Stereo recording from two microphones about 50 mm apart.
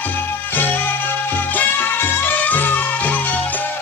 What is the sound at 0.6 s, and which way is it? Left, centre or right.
Music, left.